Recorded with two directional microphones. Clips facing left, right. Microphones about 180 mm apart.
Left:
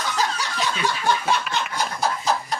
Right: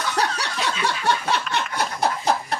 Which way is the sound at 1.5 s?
65° right (ahead or behind).